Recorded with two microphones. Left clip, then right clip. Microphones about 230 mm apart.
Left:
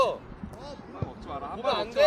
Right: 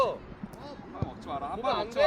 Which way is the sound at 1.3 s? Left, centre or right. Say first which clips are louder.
Right 2 dB; right.